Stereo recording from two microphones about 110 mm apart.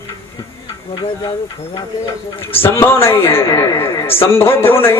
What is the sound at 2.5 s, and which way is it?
A man's voice, 20° left (ahead or behind).